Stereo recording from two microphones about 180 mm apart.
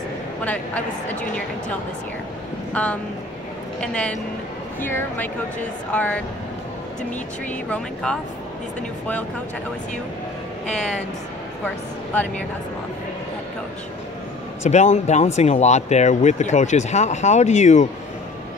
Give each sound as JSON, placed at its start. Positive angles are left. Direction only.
{"t": 0.4, "sound": "speech", "side_deg": 10}
{"t": 2.7, "sound": "speech", "side_deg": 10}
{"t": 7.7, "sound": "speech", "side_deg": 5}
{"t": 10.7, "sound": "speech", "side_deg": 5}
{"t": 14.6, "sound": "speech", "side_deg": 40}